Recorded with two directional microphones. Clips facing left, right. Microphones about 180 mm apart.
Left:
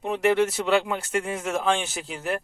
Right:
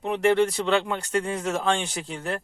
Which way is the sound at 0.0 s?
5° left (ahead or behind).